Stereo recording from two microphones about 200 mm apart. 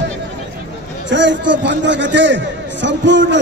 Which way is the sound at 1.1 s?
65° right (ahead or behind).